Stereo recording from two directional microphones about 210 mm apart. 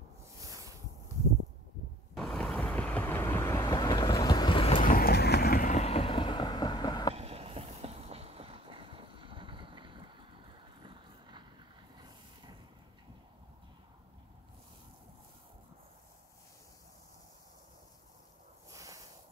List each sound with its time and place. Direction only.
0.4 s boat: 15° right (ahead or behind)
2.1 s vehicle: centre (ahead or behind); by 4.8 s 25° left (ahead or behind)
4.8 s vehicle: 45° left (ahead or behind); by 7.2 s 20° left (ahead or behind)
7.2 s a sound: 30° right (ahead or behind)
10.8 s vehicle: 20° right (ahead or behind)
18.7 s a sound: 15° right (ahead or behind)